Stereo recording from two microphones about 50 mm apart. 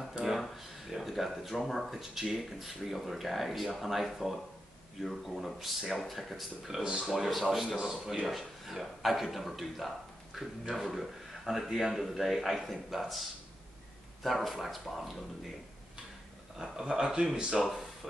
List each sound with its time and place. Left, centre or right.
0.2 s speech: centre
6.8 s a man's voice: centre
7.4 s a man's voice: centre
14.2 s speech: centre
16.7 s a man's voice: centre